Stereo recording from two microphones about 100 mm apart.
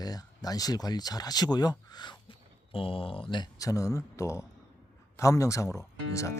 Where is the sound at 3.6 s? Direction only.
35° left (ahead or behind).